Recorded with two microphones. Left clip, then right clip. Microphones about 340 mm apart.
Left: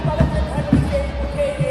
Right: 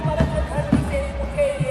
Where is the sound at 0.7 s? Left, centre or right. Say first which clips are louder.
Left 3 dB; right.